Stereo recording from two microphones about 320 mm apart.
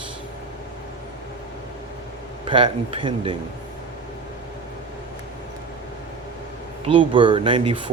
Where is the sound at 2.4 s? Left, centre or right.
Centre.